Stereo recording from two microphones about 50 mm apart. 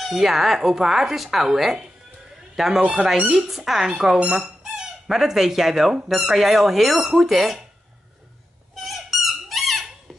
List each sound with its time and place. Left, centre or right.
0.0 s speech: centre
2.8 s speech: right
3.3 s speech: centre
8.7 s squeak: centre